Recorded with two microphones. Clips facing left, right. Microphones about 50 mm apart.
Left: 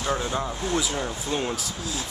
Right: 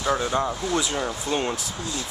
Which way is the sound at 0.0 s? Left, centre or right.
Centre.